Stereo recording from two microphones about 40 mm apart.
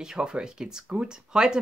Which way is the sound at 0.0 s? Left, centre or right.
Centre.